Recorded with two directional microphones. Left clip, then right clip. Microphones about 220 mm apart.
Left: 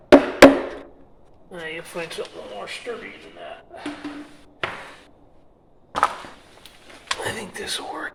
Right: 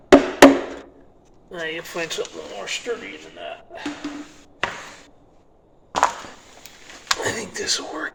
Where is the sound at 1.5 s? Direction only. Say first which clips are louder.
Right 4 dB; 15° right (ahead or behind).